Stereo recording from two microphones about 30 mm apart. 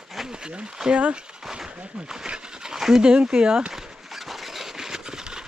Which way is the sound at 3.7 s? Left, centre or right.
Centre.